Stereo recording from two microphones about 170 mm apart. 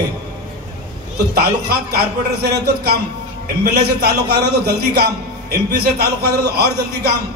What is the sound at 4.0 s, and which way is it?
A man's voice, 70° right (ahead or behind).